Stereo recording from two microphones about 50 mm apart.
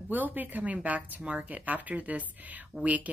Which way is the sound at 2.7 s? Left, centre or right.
Centre.